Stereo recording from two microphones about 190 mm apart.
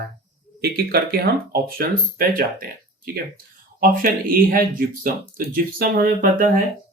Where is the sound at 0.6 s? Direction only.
55° right (ahead or behind).